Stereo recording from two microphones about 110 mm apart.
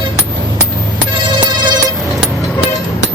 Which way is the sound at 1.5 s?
40° right (ahead or behind).